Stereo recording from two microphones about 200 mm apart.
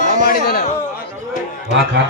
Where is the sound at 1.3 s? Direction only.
40° left (ahead or behind).